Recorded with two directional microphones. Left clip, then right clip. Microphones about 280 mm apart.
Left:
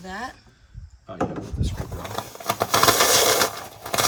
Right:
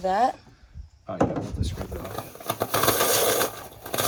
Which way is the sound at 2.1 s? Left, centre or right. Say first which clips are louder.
Left 5 dB; left.